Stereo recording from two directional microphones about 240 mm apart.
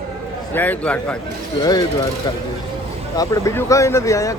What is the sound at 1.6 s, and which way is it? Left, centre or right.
Speech, centre.